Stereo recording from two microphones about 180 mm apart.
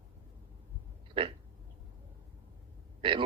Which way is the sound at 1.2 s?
30° right (ahead or behind).